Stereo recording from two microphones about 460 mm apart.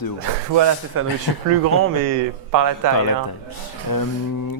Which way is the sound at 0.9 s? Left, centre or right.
Right.